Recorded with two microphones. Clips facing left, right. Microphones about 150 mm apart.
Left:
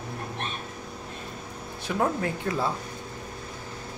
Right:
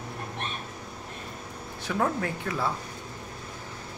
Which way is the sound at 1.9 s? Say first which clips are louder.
Left 1 dB; 20° left (ahead or behind).